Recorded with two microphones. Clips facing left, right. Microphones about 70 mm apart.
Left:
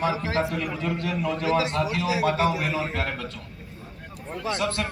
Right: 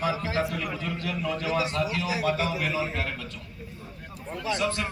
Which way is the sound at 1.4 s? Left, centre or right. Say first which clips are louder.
Left 4 dB; left.